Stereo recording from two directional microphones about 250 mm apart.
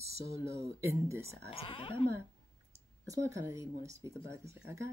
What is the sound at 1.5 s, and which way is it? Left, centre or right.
Speech, left.